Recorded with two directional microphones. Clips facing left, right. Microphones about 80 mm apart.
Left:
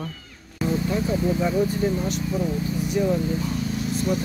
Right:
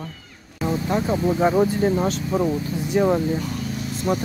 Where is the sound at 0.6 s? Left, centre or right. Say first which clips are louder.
Right 2 dB; right.